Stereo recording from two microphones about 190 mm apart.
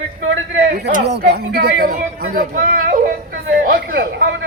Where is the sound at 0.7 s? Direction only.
60° right (ahead or behind).